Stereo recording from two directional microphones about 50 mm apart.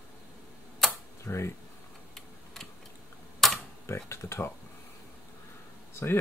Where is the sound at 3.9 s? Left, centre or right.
Left.